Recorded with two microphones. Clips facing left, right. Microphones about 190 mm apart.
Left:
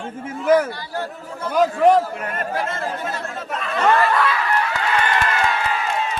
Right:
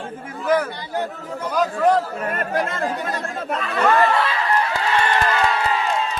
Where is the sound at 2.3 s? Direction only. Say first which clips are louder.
Right 2 dB; 55° right (ahead or behind).